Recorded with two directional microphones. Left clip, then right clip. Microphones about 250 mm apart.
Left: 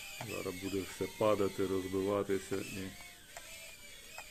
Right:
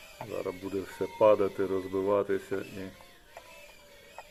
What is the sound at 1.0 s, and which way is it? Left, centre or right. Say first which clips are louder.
Speech: right 9 dB; left.